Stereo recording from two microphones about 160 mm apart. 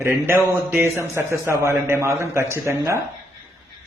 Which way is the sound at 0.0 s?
15° right (ahead or behind).